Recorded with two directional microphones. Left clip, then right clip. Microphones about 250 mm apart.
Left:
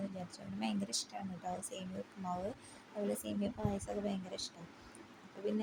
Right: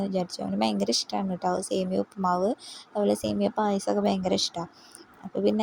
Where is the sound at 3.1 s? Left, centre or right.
Right.